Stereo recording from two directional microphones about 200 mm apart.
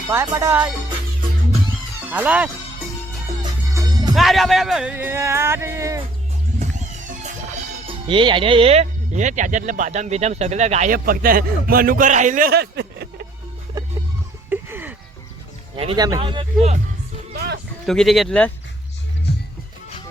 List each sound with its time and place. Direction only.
0.1 s speech: 15° right (ahead or behind)
2.0 s speech: 5° right (ahead or behind)
3.4 s music: 20° right (ahead or behind)
4.1 s speech: centre (ahead or behind); by 6.1 s 15° right (ahead or behind)
6.6 s music: 35° right (ahead or behind)
8.0 s speech: 25° right (ahead or behind); by 13.2 s 55° right (ahead or behind)
13.7 s music: 20° right (ahead or behind)
14.5 s a sound: 10° right (ahead or behind)
15.7 s speech: 25° right (ahead or behind)
17.3 s music: 55° right (ahead or behind)
17.8 s speech: centre (ahead or behind)